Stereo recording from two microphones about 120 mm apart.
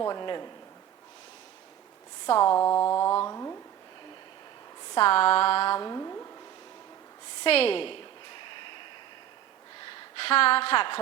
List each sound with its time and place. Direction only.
0.0 s speech: 35° left (ahead or behind)
2.2 s speech: 35° left (ahead or behind)
2.6 s mantra: 25° left (ahead or behind)
4.9 s a sound: 50° left (ahead or behind)
5.8 s speech: 30° left (ahead or behind)
7.4 s a sound: 55° left (ahead or behind)
9.9 s a woman's voice: 55° left (ahead or behind)